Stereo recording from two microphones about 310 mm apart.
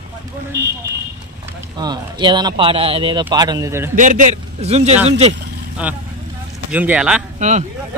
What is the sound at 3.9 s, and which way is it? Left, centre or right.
A man's voice, right.